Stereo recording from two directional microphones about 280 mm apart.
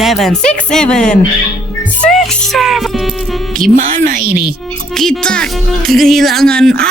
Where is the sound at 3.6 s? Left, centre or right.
Right.